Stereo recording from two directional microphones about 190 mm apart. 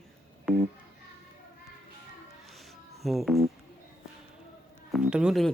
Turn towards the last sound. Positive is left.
turn(degrees=0)  # may be behind; listen again after turning